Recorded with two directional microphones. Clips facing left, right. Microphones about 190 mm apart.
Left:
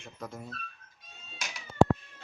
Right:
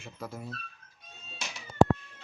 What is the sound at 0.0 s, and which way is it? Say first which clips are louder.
Speech: right 1 dB; 5° right (ahead or behind).